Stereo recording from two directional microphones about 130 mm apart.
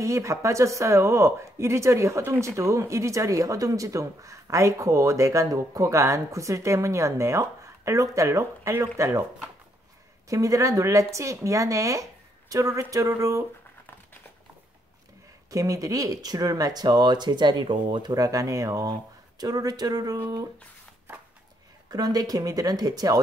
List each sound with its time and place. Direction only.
0.0 s speech: 25° right (ahead or behind)
10.2 s speech: 25° right (ahead or behind)
15.5 s speech: 25° right (ahead or behind)
21.8 s speech: 30° right (ahead or behind)